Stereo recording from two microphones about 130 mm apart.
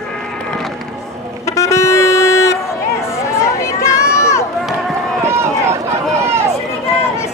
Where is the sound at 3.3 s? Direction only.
20° left (ahead or behind).